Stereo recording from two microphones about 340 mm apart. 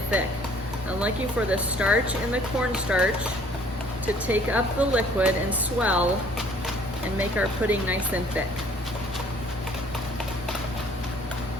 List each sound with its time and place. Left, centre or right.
0.9 s speech: centre
7.2 s speech: centre